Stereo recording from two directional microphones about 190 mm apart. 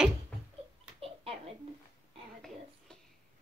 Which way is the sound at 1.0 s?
30° right (ahead or behind).